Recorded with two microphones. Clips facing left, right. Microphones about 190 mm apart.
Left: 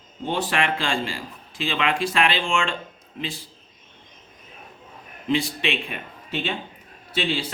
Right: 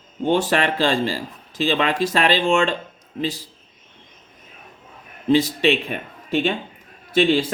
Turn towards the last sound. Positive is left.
turn(degrees=-45)  # may be behind; listen again after turning